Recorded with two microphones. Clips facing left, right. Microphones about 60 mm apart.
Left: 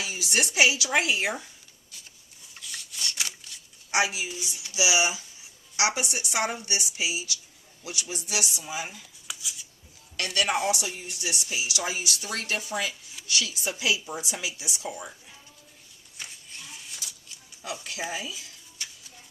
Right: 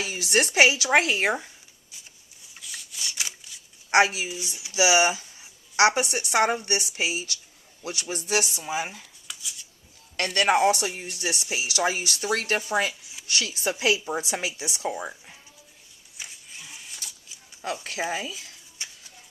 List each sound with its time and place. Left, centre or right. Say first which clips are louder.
0.0 s speech: right 4 dB; right
2.6 s rub: left 1 dB; centre
3.9 s speech: right 6 dB; right
9.2 s a sound: left 2 dB; centre
10.2 s speech: right 5 dB; right
16.1 s a sound: even; centre
17.7 s speech: right 3 dB; right
18.8 s vehicle: right 1 dB; right